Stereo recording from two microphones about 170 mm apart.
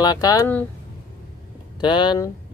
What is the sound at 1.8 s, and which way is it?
Speech, 25° left (ahead or behind).